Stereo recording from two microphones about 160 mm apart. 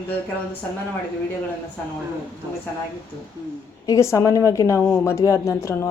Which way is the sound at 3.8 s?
20° left (ahead or behind).